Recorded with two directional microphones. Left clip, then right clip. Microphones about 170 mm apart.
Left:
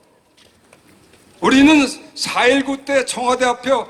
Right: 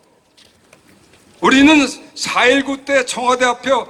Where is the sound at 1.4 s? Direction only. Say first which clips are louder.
Right 2 dB; 30° left (ahead or behind).